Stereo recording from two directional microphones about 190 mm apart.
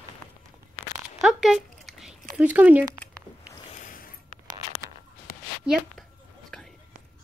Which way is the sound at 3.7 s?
45° left (ahead or behind).